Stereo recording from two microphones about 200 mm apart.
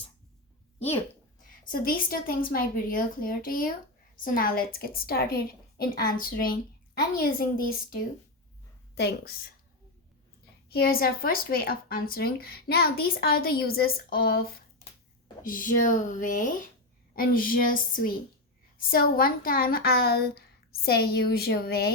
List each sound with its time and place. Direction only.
1.5 s speech: 45° left (ahead or behind)
9.0 s speech: 55° left (ahead or behind)
10.7 s speech: 50° left (ahead or behind)